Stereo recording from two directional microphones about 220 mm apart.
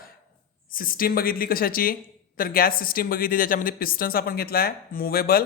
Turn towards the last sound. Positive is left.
turn(degrees=45)  # may be behind; listen again after turning